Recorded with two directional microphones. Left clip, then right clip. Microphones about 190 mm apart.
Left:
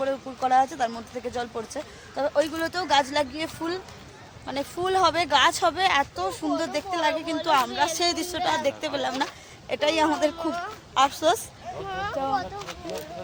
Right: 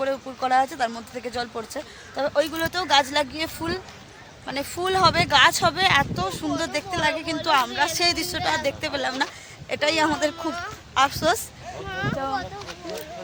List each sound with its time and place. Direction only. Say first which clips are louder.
0.0 s speech: right 1 dB; 15° right (ahead or behind)